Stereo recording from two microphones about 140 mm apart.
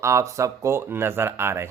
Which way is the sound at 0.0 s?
20° right (ahead or behind).